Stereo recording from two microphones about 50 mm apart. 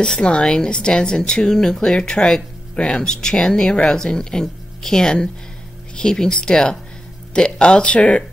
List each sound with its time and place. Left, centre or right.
0.0 s speech: centre